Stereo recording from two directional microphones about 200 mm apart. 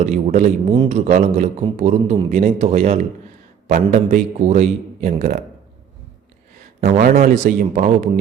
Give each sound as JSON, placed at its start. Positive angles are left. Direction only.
{"t": 0.0, "sound": "a man's voice", "side_deg": -35}
{"t": 6.8, "sound": "a man's voice", "side_deg": -40}